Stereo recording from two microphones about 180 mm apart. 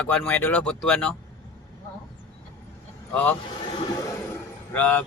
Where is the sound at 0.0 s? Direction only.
5° left (ahead or behind).